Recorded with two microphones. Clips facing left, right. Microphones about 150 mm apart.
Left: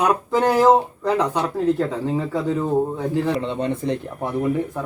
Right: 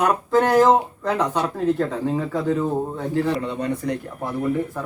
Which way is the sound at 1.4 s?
5° right (ahead or behind).